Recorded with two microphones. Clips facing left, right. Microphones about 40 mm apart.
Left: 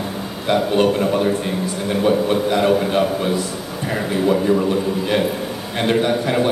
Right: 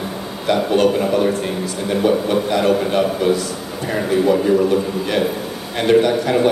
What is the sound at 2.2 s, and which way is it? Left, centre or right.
Speech, left.